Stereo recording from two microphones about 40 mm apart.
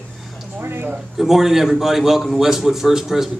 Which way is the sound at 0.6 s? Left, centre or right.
Right.